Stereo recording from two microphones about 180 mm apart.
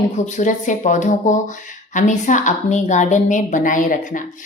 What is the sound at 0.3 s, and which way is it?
A woman's voice, 45° left (ahead or behind).